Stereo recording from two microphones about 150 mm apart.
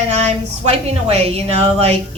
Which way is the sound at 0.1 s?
45° right (ahead or behind).